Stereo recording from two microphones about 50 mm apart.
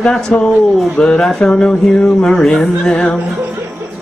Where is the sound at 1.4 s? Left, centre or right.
Centre.